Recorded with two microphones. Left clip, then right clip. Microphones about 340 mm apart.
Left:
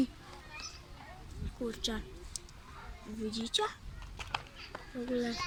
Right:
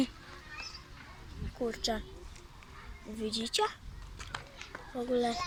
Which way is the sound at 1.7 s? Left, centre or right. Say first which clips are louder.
Right 2 dB; centre.